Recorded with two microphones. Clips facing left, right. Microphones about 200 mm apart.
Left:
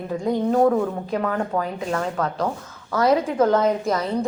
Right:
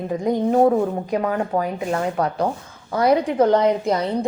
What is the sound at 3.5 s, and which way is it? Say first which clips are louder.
Speech: right 2 dB; 15° right (ahead or behind).